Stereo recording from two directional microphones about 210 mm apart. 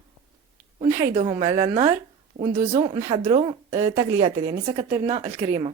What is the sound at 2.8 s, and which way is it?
A woman's voice, 20° right (ahead or behind).